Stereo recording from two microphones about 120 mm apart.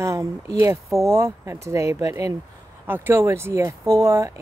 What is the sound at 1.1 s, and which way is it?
Speech, 25° right (ahead or behind).